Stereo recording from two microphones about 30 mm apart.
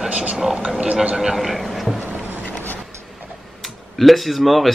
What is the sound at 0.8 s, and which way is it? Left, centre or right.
Speech, right.